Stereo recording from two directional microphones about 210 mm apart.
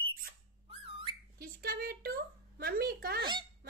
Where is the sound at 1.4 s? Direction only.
50° right (ahead or behind).